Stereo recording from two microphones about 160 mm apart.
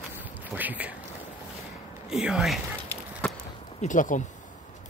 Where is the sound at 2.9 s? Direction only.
10° left (ahead or behind).